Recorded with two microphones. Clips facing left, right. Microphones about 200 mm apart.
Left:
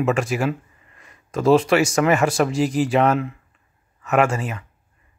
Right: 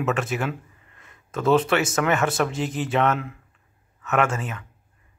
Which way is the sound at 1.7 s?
5° left (ahead or behind).